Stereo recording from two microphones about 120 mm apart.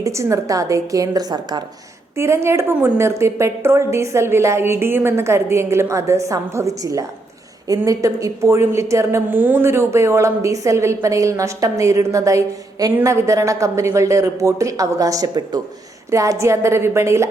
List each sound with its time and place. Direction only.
0.0 s a woman's voice: 25° right (ahead or behind)
2.1 s a woman's voice: 20° right (ahead or behind)